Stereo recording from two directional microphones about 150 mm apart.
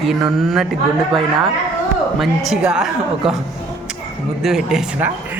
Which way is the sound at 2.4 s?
5° right (ahead or behind).